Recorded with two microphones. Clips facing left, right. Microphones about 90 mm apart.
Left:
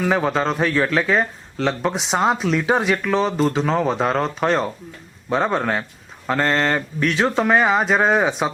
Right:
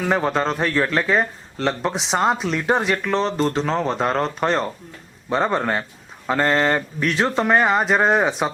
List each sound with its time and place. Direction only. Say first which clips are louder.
0.0 s speech: left 1 dB; centre (ahead or behind)